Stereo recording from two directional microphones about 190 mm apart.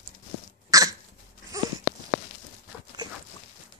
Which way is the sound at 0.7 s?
20° right (ahead or behind).